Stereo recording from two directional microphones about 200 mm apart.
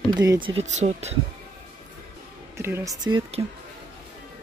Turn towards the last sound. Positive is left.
turn(degrees=-20)  # may be behind; listen again after turning